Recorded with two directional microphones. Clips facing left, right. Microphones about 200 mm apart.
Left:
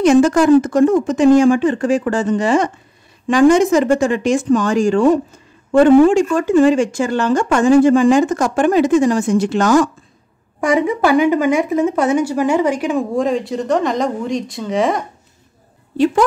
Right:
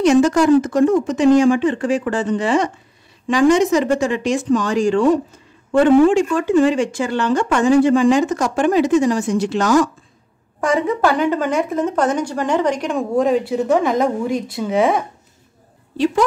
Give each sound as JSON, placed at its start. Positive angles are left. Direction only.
{"t": 0.0, "sound": "speech", "side_deg": 50}
{"t": 10.6, "sound": "speech", "side_deg": 10}